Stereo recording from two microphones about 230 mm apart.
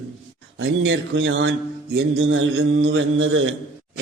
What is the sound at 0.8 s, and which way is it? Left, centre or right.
Speech, right.